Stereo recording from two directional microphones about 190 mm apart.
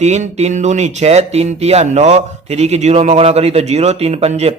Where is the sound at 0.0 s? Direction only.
35° right (ahead or behind).